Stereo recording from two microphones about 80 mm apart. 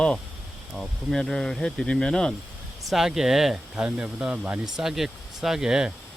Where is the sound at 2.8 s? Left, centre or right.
Centre.